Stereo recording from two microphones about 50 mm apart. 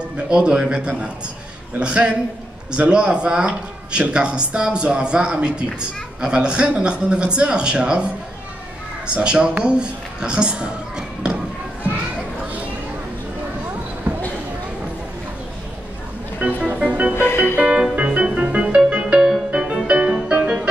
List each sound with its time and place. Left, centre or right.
0.3 s a man's voice: centre
14.1 s a sound: right
16.3 s music: right
17.1 s music: left
17.9 s music: centre